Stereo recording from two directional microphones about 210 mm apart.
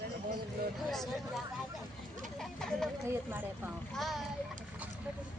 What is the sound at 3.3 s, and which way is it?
Speech, 10° right (ahead or behind).